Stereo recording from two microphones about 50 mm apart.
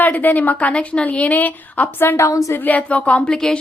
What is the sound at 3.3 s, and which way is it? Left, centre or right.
Speech, centre.